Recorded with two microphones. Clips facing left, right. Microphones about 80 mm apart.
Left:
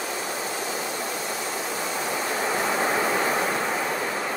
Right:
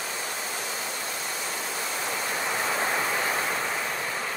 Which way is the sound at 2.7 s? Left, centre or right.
Centre.